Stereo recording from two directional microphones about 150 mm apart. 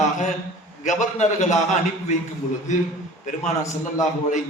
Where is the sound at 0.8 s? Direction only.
55° left (ahead or behind).